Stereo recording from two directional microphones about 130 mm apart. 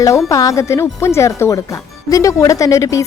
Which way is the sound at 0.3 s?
25° left (ahead or behind).